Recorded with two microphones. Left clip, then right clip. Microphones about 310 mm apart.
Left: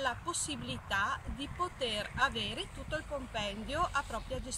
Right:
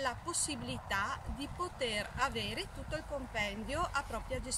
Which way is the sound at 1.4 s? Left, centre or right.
Right.